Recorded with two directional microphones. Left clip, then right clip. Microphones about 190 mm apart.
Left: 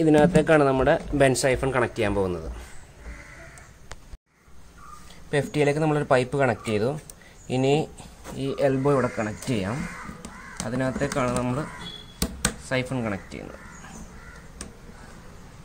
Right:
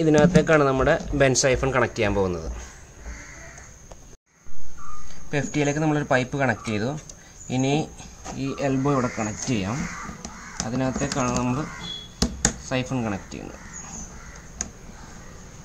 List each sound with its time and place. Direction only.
0.0 s speech: 15° left (ahead or behind)
5.3 s speech: 25° left (ahead or behind)
10.8 s speech: 15° left (ahead or behind)
12.6 s speech: 20° left (ahead or behind)